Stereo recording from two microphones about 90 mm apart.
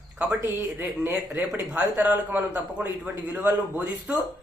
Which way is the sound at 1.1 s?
15° right (ahead or behind).